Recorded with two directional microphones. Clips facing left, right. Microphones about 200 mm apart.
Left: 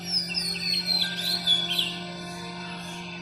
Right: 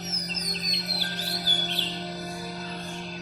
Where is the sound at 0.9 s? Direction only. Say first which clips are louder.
Right 2 dB; 35° right (ahead or behind).